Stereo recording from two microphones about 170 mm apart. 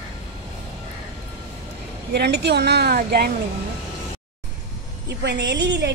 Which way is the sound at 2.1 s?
75° right (ahead or behind).